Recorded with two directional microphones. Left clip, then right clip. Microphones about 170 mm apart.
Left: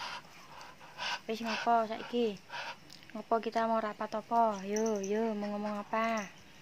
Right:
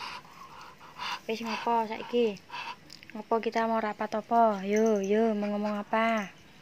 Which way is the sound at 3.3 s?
10° right (ahead or behind).